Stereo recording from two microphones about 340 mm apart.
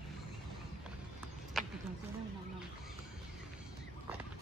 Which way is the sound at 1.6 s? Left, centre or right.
Centre.